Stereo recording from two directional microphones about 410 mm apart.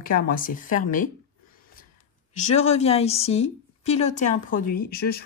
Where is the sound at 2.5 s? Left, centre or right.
Centre.